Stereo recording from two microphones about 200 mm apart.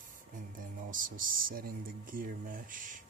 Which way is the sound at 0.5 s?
45° right (ahead or behind).